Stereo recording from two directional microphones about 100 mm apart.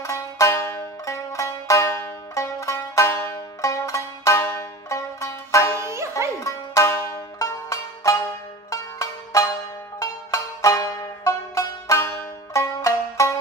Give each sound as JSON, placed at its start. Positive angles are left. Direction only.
{"t": 0.0, "sound": "music", "side_deg": 30}
{"t": 5.8, "sound": "music", "side_deg": -30}
{"t": 6.4, "sound": "music", "side_deg": 30}
{"t": 12.1, "sound": "banjo", "side_deg": 30}